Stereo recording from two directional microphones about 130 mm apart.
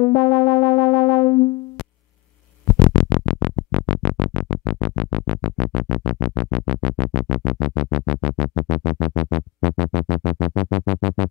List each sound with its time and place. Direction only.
0.0 s synthesizer: 20° left (ahead or behind)
2.8 s music: 30° left (ahead or behind)